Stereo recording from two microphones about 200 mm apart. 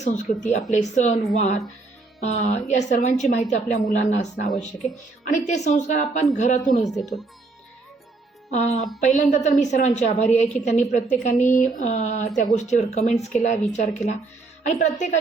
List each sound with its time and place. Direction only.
0.0 s a woman's voice: 35° left (ahead or behind)
7.0 s speech: centre (ahead or behind)
8.4 s a woman's voice: 35° left (ahead or behind)